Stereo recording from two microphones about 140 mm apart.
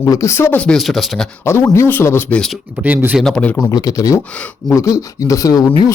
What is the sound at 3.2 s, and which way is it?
Speech, 5° left (ahead or behind).